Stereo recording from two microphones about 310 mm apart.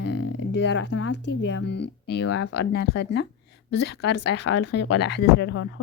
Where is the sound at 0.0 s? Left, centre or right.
Left.